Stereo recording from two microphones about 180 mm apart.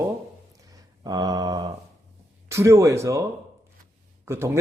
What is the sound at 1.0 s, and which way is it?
A man's voice, 20° right (ahead or behind).